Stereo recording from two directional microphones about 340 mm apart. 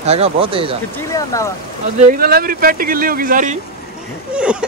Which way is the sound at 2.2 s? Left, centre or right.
Right.